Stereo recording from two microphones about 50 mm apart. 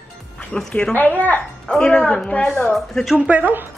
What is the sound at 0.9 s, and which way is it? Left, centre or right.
Speech, left.